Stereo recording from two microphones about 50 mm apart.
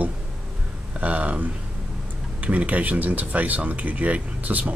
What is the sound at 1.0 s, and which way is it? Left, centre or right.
Speech, right.